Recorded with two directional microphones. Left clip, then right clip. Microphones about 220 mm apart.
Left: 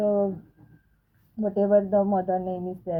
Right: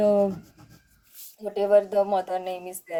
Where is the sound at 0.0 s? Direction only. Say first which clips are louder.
Right 3 dB; 25° right (ahead or behind).